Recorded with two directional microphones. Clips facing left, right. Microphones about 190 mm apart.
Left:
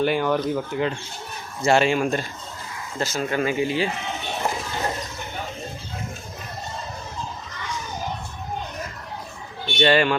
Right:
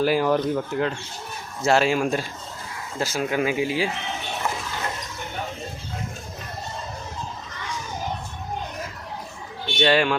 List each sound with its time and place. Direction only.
0.0 s speech: centre (ahead or behind)
9.7 s speech: centre (ahead or behind)